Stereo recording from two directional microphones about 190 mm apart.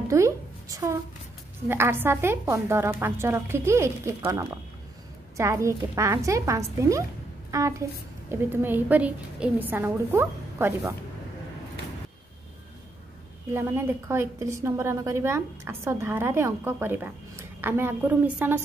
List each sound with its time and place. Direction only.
0.1 s a sound: 15° right (ahead or behind)
1.7 s a woman's voice: 10° right (ahead or behind)
13.5 s a woman's voice: 10° right (ahead or behind)